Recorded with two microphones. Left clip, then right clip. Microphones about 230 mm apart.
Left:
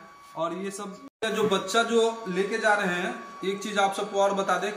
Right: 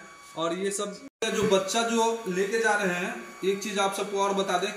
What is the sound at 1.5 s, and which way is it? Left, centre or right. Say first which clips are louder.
Speech: left 1 dB; left.